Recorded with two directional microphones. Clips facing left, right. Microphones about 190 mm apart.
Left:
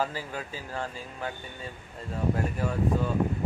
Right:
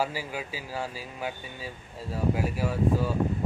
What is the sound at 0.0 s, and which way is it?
Speech, 10° right (ahead or behind).